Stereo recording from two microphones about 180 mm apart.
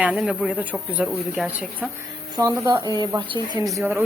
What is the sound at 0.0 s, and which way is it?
Speech, 5° right (ahead or behind).